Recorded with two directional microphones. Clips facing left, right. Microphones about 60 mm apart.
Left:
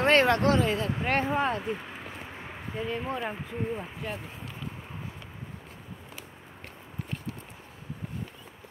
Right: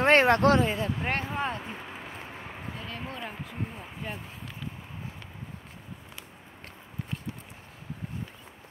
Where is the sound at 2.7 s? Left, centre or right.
Centre.